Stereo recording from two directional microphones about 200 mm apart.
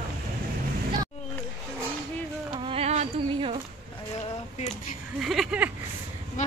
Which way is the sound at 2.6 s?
30° right (ahead or behind).